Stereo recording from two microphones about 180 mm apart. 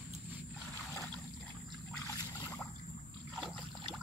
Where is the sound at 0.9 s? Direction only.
15° left (ahead or behind).